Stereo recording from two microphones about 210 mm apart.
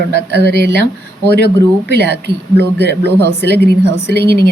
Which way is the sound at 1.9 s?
50° right (ahead or behind).